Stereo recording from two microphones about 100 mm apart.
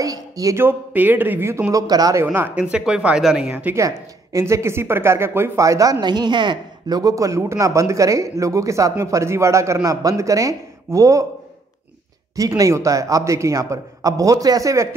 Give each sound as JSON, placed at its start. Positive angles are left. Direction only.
{"t": 0.0, "sound": "speech", "side_deg": -35}
{"t": 0.6, "sound": "a man's voice", "side_deg": -20}
{"t": 2.3, "sound": "a man's voice", "side_deg": -20}
{"t": 2.6, "sound": "speech", "side_deg": -10}
{"t": 3.7, "sound": "a man's voice", "side_deg": -30}
{"t": 12.4, "sound": "speech", "side_deg": -35}